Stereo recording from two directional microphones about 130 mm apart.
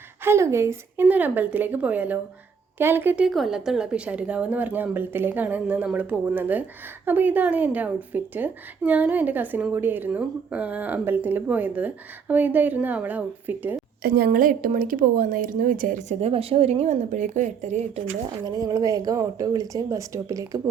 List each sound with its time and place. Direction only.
0.3 s a woman's voice: 20° right (ahead or behind)
14.3 s speech: 90° right
16.2 s speech: 50° right (ahead or behind)
18.4 s speech: 30° right (ahead or behind)